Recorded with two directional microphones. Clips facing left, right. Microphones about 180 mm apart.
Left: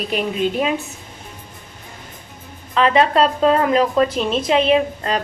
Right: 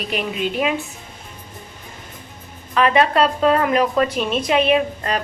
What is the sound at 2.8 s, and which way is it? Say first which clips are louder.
A woman's voice: left 1 dB; 25° left (ahead or behind).